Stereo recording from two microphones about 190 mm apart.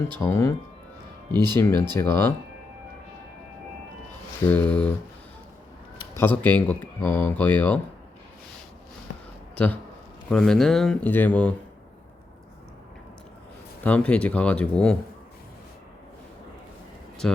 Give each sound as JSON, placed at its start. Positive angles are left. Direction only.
{"t": 0.3, "sound": "speech", "side_deg": 15}
{"t": 1.3, "sound": "speech", "side_deg": -20}
{"t": 1.5, "sound": "speech", "side_deg": 15}
{"t": 4.4, "sound": "speech", "side_deg": 10}
{"t": 6.1, "sound": "speech", "side_deg": 10}
{"t": 10.2, "sound": "speech", "side_deg": 5}
{"t": 13.8, "sound": "speech", "side_deg": 5}
{"t": 17.2, "sound": "speech", "side_deg": 5}